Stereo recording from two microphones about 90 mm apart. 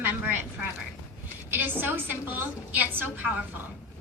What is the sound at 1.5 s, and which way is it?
A woman's voice, 20° right (ahead or behind).